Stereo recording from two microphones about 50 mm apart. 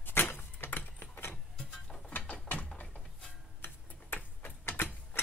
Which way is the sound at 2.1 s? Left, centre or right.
Left.